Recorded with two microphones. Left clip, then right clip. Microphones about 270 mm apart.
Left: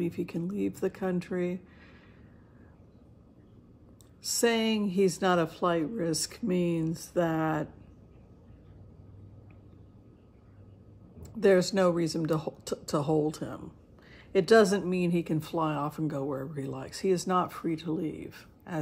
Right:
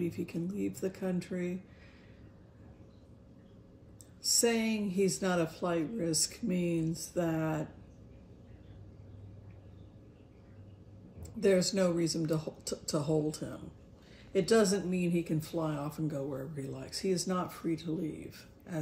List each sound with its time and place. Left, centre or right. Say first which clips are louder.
0.0 s speech: left 3 dB; centre
4.5 s speech: left 4 dB; left
11.3 s speech: left 5 dB; left
15.3 s speech: left 5 dB; centre
17.4 s speech: left 6 dB; centre